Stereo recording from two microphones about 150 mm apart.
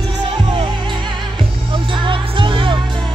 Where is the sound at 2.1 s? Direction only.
35° right (ahead or behind).